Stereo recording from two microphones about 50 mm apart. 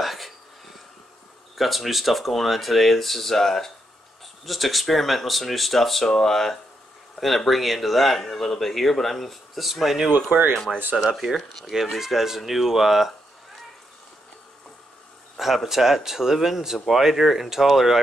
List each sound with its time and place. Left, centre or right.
0.0 s a sound: centre
1.6 s speech: centre
10.1 s speech: right
10.5 s speech: centre
11.1 s speech: centre
15.3 s speech: centre